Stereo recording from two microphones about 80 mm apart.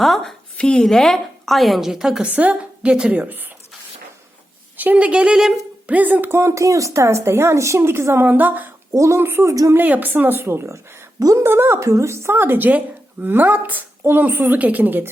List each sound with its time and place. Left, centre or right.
0.0 s a woman's voice: centre; by 3.4 s right
4.8 s a woman's voice: centre
5.9 s speech: right
8.9 s speech: right
9.2 s a woman's voice: right
9.5 s speech: right
9.7 s a woman's voice: right